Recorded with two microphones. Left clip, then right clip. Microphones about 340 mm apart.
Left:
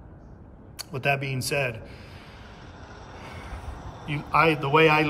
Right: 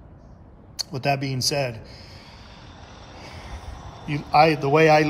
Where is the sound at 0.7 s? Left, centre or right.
Centre.